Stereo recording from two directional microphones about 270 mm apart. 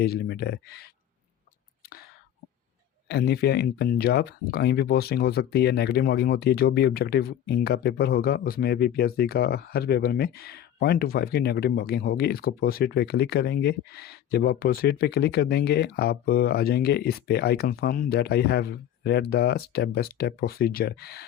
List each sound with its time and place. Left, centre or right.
0.0 s speech: left
3.1 s speech: left